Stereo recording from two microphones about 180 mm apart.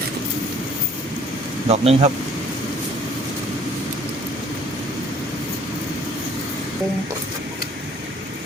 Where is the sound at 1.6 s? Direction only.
35° right (ahead or behind).